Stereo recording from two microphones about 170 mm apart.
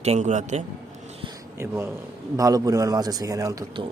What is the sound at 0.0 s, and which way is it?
Speech, 40° right (ahead or behind).